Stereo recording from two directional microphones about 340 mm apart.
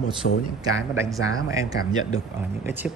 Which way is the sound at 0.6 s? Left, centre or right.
Centre.